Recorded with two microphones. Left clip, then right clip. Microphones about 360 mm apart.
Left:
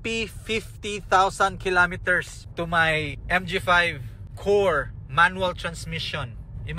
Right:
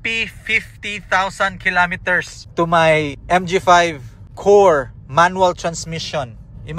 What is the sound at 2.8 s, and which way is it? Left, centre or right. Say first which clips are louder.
Speech: right 9 dB; right.